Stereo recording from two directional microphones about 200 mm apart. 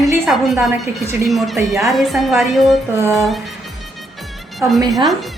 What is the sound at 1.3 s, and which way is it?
Speech, centre (ahead or behind).